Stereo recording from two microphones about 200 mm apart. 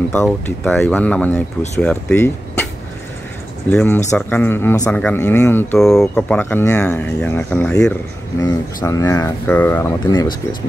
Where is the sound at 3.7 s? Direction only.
10° left (ahead or behind).